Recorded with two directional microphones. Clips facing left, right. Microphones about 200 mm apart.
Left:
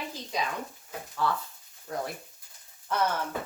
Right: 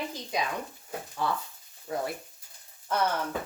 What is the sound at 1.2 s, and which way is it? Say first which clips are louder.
Speech: left 1 dB; 15° right (ahead or behind).